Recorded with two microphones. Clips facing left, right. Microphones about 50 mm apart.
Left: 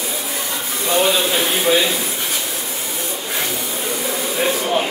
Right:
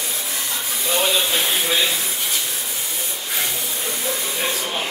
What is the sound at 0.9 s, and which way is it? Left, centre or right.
Speech, centre.